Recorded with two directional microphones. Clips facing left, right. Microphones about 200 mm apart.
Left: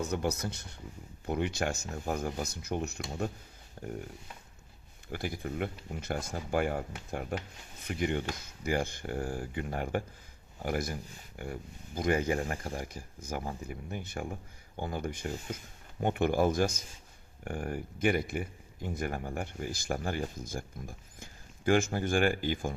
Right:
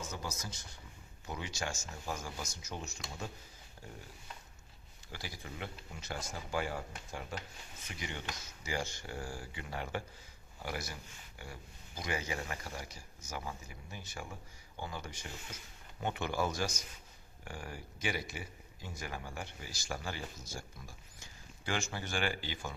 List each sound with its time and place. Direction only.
0.0 s speech: 65° left (ahead or behind)
5.1 s speech: 55° left (ahead or behind)